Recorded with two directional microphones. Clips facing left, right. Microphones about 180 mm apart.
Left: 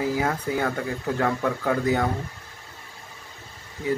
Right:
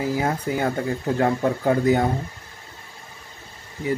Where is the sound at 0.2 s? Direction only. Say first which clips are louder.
Right 2 dB; 25° right (ahead or behind).